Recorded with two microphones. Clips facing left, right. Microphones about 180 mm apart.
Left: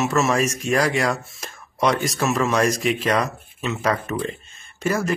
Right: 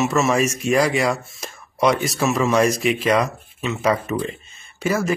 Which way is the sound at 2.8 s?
5° right (ahead or behind).